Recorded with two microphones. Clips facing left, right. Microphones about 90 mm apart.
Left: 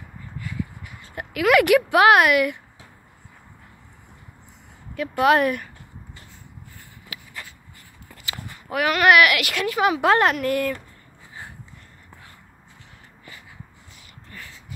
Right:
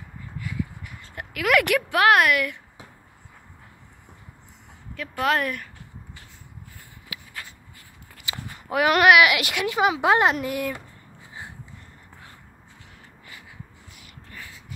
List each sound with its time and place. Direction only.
1.0 s speech: 5° left (ahead or behind)
4.9 s speech: 10° left (ahead or behind)
8.3 s a sound: 20° right (ahead or behind)
9.2 s a woman's voice: 20° right (ahead or behind)